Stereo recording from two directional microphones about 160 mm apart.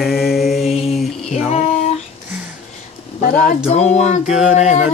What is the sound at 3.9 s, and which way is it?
Female singing, 45° left (ahead or behind).